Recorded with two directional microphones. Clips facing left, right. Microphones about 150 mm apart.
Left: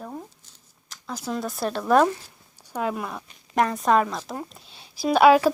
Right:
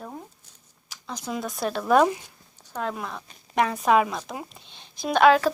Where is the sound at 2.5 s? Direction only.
10° left (ahead or behind).